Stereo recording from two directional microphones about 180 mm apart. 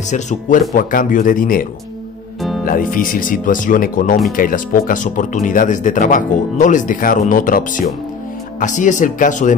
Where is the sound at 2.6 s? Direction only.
50° left (ahead or behind).